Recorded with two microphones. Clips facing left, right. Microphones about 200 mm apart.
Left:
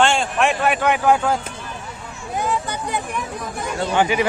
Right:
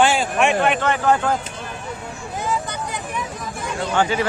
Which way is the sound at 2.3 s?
60° left (ahead or behind).